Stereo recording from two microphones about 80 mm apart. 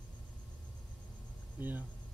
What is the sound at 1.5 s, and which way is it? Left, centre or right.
Speech, right.